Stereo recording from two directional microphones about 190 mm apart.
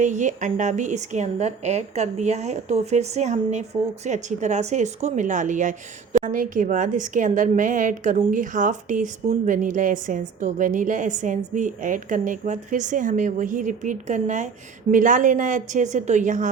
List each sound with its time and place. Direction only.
0.0 s a woman's voice: 40° right (ahead or behind)